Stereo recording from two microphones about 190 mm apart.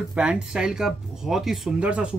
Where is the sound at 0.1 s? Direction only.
5° right (ahead or behind).